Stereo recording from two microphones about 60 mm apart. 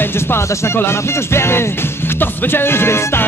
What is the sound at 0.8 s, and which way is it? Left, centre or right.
Music, left.